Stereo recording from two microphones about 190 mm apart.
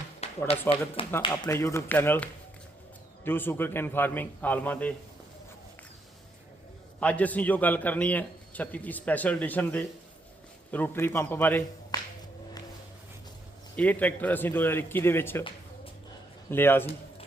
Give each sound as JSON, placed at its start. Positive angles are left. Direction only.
{"t": 0.2, "sound": "a sound", "side_deg": 35}
{"t": 1.2, "sound": "a man's voice", "side_deg": 20}
{"t": 7.0, "sound": "a man's voice", "side_deg": 10}
{"t": 13.7, "sound": "a man's voice", "side_deg": 10}
{"t": 16.5, "sound": "a man's voice", "side_deg": 10}